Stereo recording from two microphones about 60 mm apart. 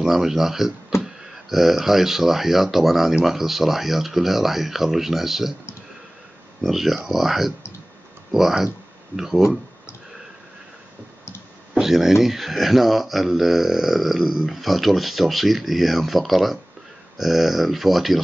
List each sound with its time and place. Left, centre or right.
0.0 s speech: centre
6.6 s speech: centre
11.8 s speech: centre